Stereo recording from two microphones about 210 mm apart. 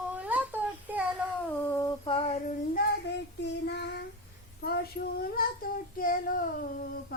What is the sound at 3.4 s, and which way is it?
Child singing, 55° left (ahead or behind).